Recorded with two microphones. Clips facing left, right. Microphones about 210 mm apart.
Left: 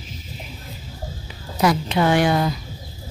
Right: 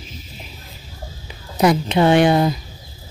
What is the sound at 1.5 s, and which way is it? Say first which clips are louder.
Speech: right 3 dB; 20° right (ahead or behind).